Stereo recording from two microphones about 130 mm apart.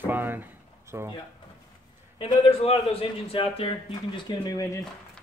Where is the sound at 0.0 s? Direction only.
15° right (ahead or behind).